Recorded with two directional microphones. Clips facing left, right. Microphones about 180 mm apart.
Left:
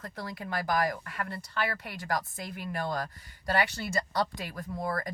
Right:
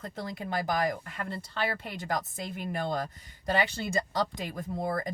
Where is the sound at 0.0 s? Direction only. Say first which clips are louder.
Right 2 dB; 20° right (ahead or behind).